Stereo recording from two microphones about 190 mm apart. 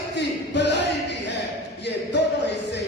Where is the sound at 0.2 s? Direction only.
65° left (ahead or behind).